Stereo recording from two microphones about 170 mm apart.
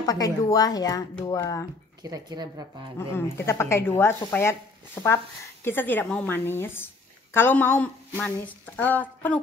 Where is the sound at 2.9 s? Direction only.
15° left (ahead or behind).